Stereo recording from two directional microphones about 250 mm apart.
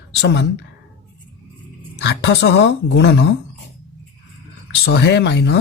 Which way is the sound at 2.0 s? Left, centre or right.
Left.